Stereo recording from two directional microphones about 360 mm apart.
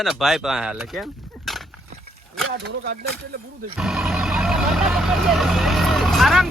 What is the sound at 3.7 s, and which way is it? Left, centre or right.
Vehicle, centre.